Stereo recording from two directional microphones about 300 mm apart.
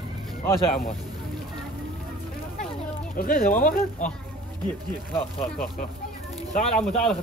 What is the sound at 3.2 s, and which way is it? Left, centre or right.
Speech, left.